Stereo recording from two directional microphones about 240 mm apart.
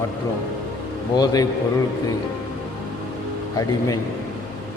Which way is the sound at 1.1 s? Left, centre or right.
Centre.